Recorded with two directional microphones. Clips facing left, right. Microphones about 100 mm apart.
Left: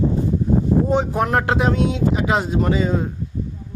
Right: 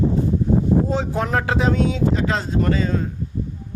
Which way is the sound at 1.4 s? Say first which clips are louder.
Left 1 dB; 10° left (ahead or behind).